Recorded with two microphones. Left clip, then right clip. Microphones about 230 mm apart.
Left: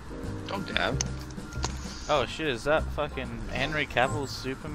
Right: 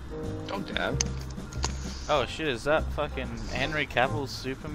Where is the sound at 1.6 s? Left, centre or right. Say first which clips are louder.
Right 1 dB; centre.